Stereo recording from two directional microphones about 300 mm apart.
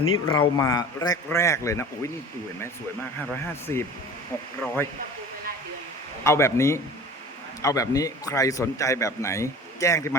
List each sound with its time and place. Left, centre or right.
0.0 s speech: left
0.3 s a man's voice: centre
3.7 s a man's voice: centre
6.2 s a man's voice: centre